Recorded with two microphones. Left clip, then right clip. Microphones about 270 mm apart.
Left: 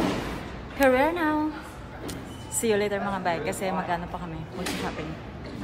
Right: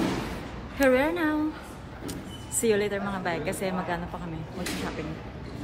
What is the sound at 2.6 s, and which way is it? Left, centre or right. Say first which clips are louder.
A woman's voice: even; centre.